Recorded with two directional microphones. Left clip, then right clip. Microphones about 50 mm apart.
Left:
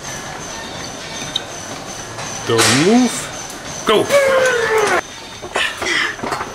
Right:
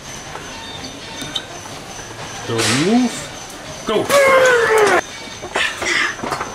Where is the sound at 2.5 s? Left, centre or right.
Centre.